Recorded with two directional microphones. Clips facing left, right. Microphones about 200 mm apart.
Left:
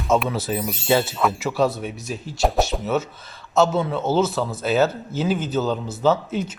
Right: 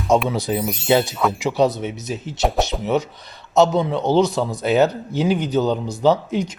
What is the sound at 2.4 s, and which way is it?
Speech, centre (ahead or behind).